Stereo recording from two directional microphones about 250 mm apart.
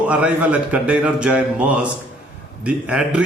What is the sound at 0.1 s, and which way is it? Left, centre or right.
A man's voice, centre.